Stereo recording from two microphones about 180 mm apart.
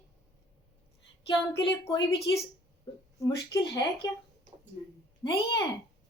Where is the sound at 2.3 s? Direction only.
25° left (ahead or behind).